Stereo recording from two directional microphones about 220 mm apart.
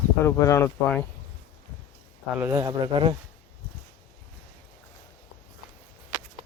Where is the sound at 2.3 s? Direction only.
10° right (ahead or behind).